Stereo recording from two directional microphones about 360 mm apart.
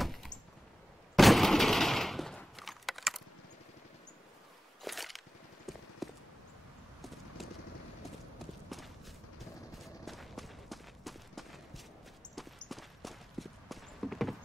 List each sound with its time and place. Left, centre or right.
0.0 s a sound: centre
1.1 s gunshot: centre
4.8 s a sound: centre
5.7 s clip-clop: centre
7.4 s clip-clop: centre
8.6 s walk: centre
9.4 s run: centre
12.4 s clip-clop: centre